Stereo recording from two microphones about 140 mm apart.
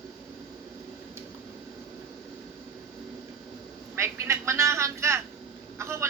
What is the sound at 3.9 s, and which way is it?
Vehicle, 20° right (ahead or behind).